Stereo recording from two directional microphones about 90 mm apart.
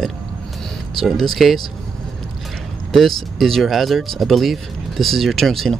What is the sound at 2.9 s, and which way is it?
Speech, centre (ahead or behind).